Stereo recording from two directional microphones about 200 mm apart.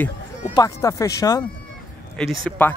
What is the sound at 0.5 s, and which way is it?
Speech, 15° left (ahead or behind).